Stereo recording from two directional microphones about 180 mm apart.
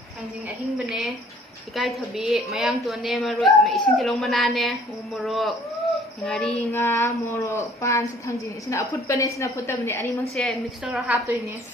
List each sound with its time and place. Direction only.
1.7 s a woman's voice: centre (ahead or behind)
6.7 s a woman's voice: 15° left (ahead or behind)
10.3 s a woman's voice: centre (ahead or behind)